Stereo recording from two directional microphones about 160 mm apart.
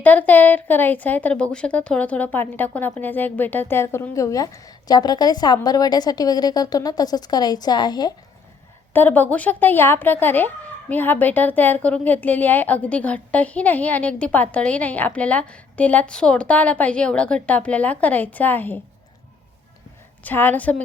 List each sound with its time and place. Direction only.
0.0 s speech: 10° left (ahead or behind); by 8.1 s 25° left (ahead or behind)
8.9 s speech: 10° left (ahead or behind)
20.2 s speech: 10° left (ahead or behind)